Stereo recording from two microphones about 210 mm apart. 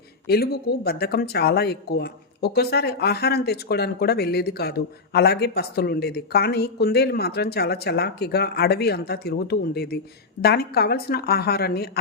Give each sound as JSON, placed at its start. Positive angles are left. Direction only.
{"t": 0.3, "sound": "speech", "side_deg": 50}